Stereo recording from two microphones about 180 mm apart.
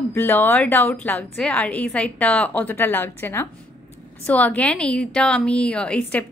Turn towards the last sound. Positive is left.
turn(degrees=5)  # may be behind; listen again after turning